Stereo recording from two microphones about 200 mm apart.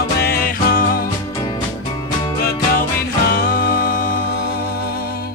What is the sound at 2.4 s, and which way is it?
Music, 50° left (ahead or behind).